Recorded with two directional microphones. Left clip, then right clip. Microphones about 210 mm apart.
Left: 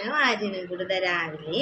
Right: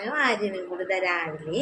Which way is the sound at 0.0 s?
5° right (ahead or behind).